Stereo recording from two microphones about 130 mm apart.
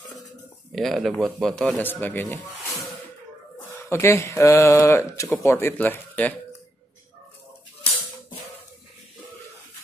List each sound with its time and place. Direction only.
0.7 s speech: centre (ahead or behind)
3.9 s speech: 20° left (ahead or behind)